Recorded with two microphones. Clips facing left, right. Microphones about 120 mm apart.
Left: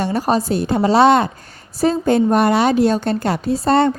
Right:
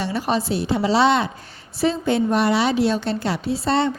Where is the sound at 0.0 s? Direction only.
45° left (ahead or behind).